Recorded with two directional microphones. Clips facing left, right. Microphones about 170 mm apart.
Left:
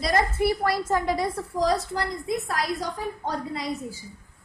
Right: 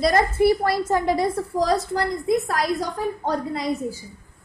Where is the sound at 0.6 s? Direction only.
25° right (ahead or behind).